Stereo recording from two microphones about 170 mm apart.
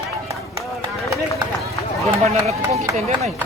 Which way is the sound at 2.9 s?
40° right (ahead or behind).